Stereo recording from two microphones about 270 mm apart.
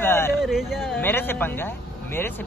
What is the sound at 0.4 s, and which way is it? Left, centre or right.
Speech, centre.